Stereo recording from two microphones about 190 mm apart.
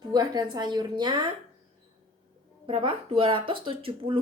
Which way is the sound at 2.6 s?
30° right (ahead or behind).